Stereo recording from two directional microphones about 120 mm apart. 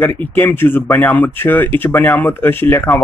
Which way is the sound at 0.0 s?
15° left (ahead or behind).